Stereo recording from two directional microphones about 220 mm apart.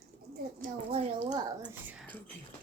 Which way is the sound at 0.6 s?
30° right (ahead or behind).